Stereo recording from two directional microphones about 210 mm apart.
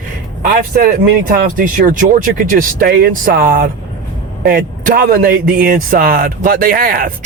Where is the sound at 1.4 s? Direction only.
40° right (ahead or behind).